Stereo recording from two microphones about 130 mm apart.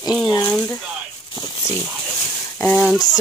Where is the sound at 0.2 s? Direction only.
30° left (ahead or behind).